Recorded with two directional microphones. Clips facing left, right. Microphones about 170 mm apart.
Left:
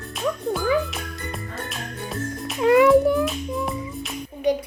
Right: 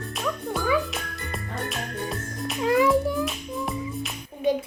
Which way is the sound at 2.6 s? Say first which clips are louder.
Left 6 dB; 65° left (ahead or behind).